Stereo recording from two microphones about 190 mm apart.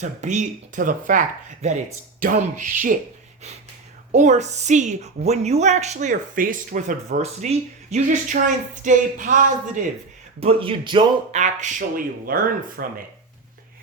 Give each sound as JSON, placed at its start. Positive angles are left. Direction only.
{"t": 0.0, "sound": "a woman's voice", "side_deg": -40}
{"t": 4.1, "sound": "a woman's voice", "side_deg": -40}
{"t": 10.4, "sound": "speech", "side_deg": -30}
{"t": 11.3, "sound": "speech", "side_deg": -40}